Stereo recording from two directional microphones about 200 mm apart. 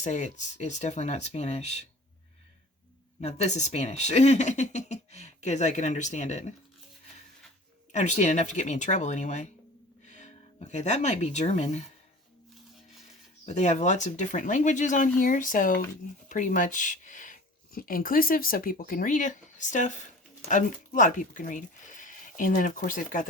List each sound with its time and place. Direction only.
0.0 s speech: 35° left (ahead or behind)
3.2 s speech: 35° left (ahead or behind)
7.9 s speech: 35° left (ahead or behind)
13.4 s speech: 35° left (ahead or behind)